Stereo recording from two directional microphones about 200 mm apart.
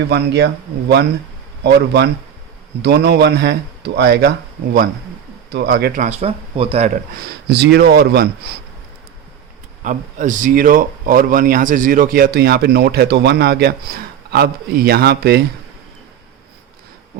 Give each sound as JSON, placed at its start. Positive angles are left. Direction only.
{"t": 0.1, "sound": "speech", "side_deg": -55}
{"t": 6.1, "sound": "speech", "side_deg": -30}
{"t": 7.2, "sound": "speech", "side_deg": -55}
{"t": 9.8, "sound": "speech", "side_deg": -40}